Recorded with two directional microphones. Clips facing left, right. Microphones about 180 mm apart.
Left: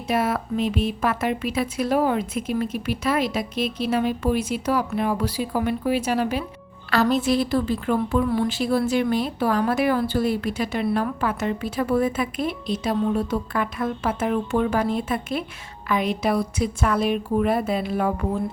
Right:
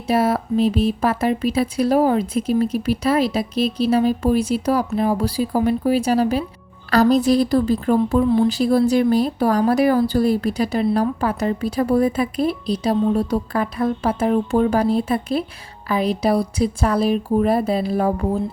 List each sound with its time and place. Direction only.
0.1 s speech: 35° right (ahead or behind)
8.2 s speech: 25° right (ahead or behind)
8.4 s speech: 40° right (ahead or behind)